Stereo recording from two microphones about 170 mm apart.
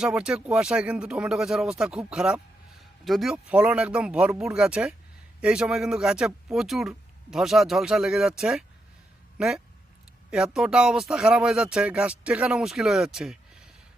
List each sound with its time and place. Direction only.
0.0 s speech: 5° right (ahead or behind)